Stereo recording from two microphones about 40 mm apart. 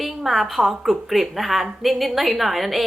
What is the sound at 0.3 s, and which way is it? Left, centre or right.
A woman's voice, centre.